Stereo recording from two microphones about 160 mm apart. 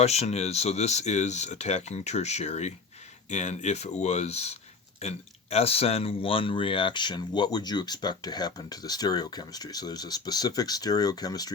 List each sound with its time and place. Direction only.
0.0 s speech: 40° left (ahead or behind); by 11.5 s 25° left (ahead or behind)